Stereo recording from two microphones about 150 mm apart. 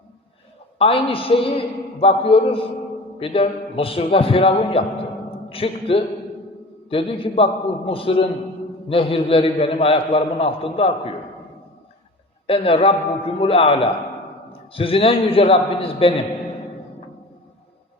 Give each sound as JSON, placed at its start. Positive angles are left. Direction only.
{"t": 0.8, "sound": "a man's voice", "side_deg": 35}
{"t": 12.5, "sound": "a man's voice", "side_deg": 40}